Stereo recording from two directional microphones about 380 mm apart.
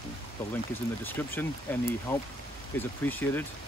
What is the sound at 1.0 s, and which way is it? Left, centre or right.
Speech, centre.